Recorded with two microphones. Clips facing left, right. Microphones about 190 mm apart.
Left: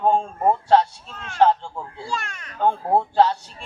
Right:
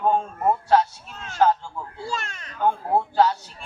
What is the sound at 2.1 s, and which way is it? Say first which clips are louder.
Speech: left 1 dB; 25° right (ahead or behind).